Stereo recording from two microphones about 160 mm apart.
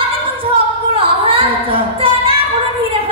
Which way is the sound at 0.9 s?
35° right (ahead or behind).